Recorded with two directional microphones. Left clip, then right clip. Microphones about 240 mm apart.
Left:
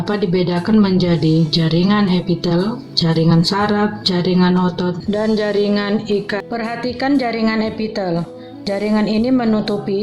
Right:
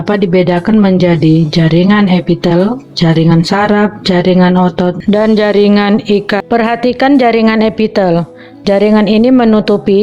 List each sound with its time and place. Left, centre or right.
0.1 s a woman's voice: right
1.2 s speech: centre
1.5 s a woman's voice: right